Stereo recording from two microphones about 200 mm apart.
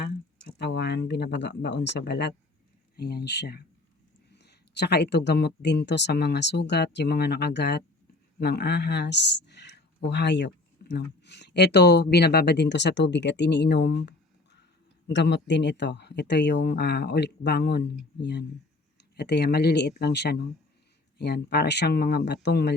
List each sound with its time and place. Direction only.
0.0 s speech: 55° left (ahead or behind)